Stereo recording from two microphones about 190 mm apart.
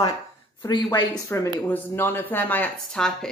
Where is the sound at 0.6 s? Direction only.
20° left (ahead or behind).